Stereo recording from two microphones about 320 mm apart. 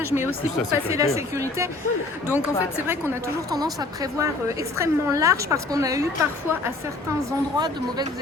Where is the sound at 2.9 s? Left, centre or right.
Centre.